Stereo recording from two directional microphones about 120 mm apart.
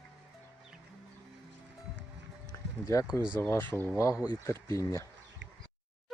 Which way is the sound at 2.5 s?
25° left (ahead or behind).